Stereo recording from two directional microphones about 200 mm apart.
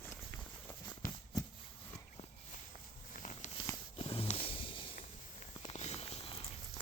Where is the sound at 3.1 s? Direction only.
40° left (ahead or behind).